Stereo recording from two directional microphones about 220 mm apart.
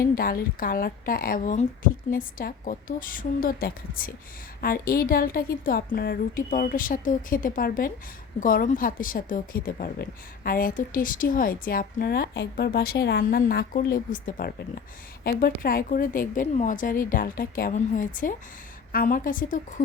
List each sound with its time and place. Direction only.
0.0 s a woman's voice: 40° left (ahead or behind)